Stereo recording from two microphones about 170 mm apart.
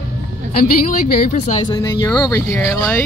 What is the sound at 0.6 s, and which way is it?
A woman's voice, 50° left (ahead or behind).